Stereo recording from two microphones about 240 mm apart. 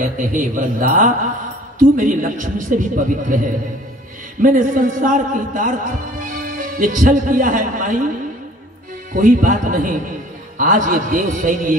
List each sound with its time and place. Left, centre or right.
0.0 s a man's voice: right
4.4 s a man's voice: right
9.1 s a man's voice: right